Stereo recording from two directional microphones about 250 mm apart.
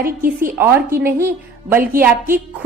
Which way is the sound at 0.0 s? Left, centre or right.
Right.